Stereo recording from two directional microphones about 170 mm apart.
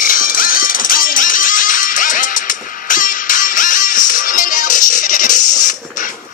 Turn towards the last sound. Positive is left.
turn(degrees=50)  # may be behind; listen again after turning